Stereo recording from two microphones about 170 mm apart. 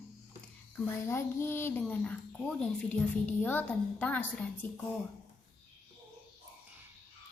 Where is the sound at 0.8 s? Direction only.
15° left (ahead or behind).